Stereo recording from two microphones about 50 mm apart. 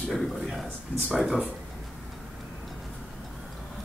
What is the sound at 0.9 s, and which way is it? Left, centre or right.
Speech, left.